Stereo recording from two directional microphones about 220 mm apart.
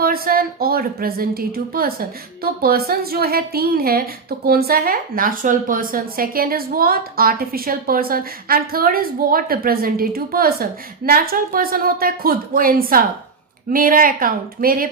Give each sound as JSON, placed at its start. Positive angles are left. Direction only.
{"t": 0.0, "sound": "a woman's voice", "side_deg": -40}